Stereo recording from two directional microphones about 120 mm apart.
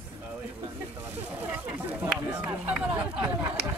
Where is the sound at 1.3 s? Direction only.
15° right (ahead or behind).